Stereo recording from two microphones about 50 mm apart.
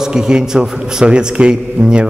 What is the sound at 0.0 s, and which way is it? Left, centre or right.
A man's voice, centre.